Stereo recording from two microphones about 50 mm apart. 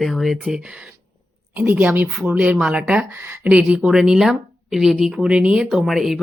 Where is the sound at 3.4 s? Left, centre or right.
Right; by 4.9 s centre.